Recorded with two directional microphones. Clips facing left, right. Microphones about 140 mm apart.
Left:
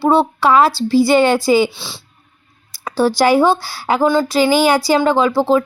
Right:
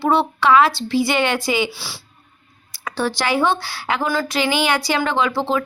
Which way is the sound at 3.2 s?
40° left (ahead or behind).